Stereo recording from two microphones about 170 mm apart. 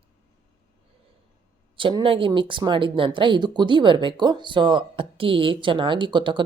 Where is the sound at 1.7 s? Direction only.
30° right (ahead or behind).